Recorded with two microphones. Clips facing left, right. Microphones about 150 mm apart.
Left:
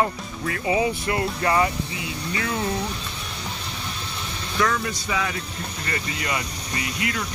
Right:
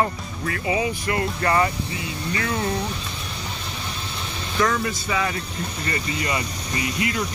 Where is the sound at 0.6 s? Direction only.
30° left (ahead or behind).